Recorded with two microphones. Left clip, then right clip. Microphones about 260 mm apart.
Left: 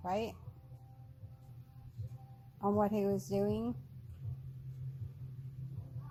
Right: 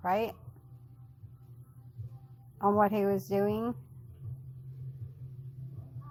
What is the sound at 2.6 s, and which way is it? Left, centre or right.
Speech, right.